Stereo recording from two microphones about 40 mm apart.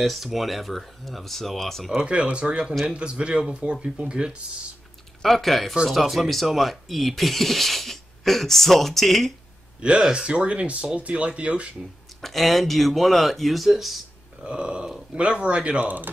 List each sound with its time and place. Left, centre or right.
0.0 s speech: centre
2.3 s speech: right
5.2 s speech: centre
9.8 s speech: right
12.2 s speech: centre
14.4 s speech: right
15.8 s speech: right